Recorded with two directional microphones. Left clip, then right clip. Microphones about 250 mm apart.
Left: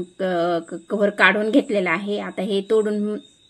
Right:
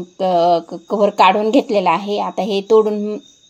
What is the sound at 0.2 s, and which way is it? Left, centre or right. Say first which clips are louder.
A woman's voice: right 8 dB; right.